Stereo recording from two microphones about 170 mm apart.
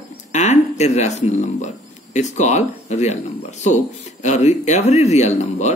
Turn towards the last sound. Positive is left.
turn(degrees=40)  # may be behind; listen again after turning